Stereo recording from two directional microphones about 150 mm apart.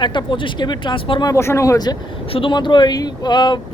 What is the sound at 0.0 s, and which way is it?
Speech, 30° left (ahead or behind).